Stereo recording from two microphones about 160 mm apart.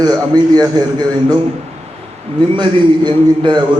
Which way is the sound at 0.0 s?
25° right (ahead or behind).